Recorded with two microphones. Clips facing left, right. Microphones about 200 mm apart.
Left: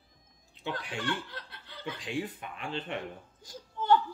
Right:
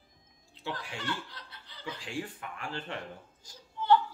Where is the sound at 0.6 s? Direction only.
20° left (ahead or behind).